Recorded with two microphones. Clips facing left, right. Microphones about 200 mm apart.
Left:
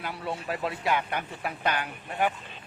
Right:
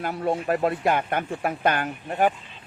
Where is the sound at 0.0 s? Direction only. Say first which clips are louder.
Right 8 dB; 45° right (ahead or behind).